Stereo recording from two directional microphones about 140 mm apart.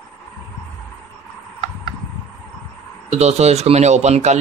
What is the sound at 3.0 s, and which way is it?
Speech, 50° right (ahead or behind).